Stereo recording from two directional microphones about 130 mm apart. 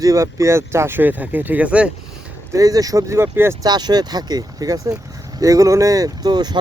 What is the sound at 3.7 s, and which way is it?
Speech, 30° right (ahead or behind).